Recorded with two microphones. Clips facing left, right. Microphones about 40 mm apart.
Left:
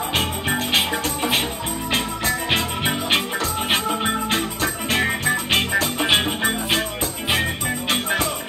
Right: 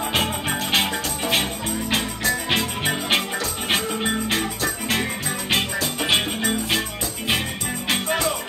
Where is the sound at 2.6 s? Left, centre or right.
Centre.